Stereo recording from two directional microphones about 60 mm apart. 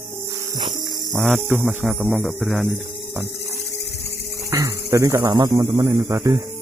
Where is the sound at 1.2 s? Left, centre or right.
Centre.